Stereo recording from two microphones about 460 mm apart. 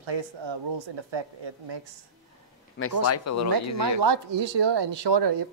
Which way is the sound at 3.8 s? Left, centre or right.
Right.